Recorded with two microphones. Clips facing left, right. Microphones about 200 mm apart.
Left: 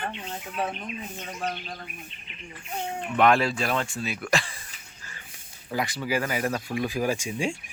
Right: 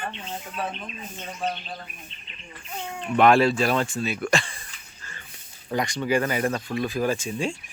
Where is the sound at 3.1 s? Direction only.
30° right (ahead or behind).